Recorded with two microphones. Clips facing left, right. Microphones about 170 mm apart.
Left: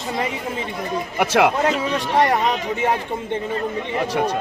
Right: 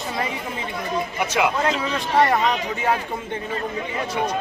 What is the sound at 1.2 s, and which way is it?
Speech, 60° left (ahead or behind).